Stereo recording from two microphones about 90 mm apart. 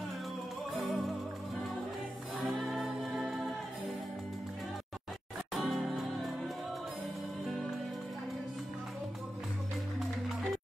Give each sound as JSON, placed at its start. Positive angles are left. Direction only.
{"t": 0.7, "sound": "music", "side_deg": 0}
{"t": 2.4, "sound": "music", "side_deg": 0}
{"t": 5.5, "sound": "music", "side_deg": 0}